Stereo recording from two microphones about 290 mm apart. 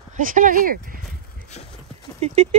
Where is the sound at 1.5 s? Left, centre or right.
Left.